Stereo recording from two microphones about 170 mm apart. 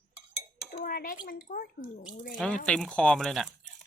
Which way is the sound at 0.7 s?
50° left (ahead or behind).